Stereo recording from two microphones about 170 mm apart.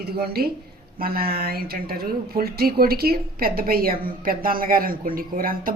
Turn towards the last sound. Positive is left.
turn(degrees=-55)  # may be behind; listen again after turning